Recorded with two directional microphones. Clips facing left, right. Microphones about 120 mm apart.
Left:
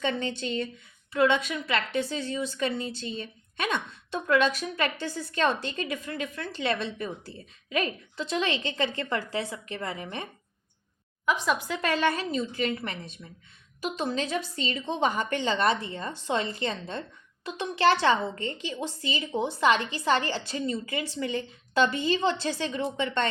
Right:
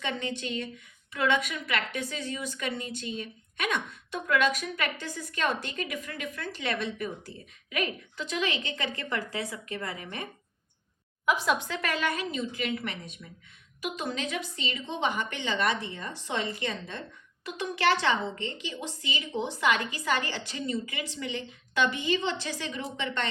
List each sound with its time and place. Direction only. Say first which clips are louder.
0.0 s a woman's voice: left 4 dB; 30° left (ahead or behind)
11.3 s a woman's voice: even; centre (ahead or behind)
11.7 s a woman's voice: left 4 dB; 25° left (ahead or behind)